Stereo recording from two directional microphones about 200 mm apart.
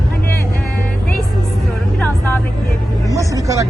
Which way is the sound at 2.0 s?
10° left (ahead or behind).